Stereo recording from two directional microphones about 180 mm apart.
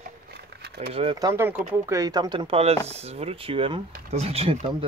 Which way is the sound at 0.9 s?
25° right (ahead or behind).